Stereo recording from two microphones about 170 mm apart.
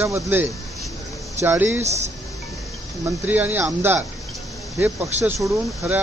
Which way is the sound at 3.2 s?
10° right (ahead or behind).